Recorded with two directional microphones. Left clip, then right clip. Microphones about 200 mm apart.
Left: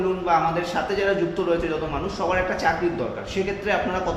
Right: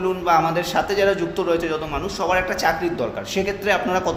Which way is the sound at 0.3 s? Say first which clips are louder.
Right 4 dB; 60° right (ahead or behind).